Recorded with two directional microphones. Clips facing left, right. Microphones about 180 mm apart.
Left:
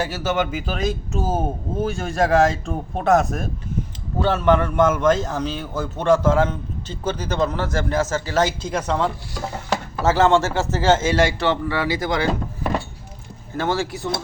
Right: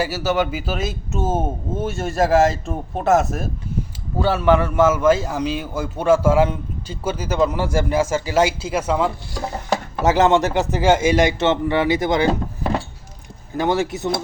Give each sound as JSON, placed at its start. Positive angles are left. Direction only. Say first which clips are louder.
{"t": 0.0, "sound": "a man's voice", "louder": "right 2 dB", "side_deg": -10}